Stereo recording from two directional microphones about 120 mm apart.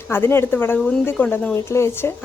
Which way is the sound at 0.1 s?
20° left (ahead or behind).